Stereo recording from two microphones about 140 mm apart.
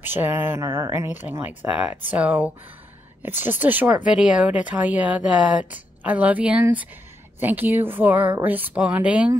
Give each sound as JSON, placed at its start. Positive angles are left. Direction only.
{"t": 0.0, "sound": "speech", "side_deg": -15}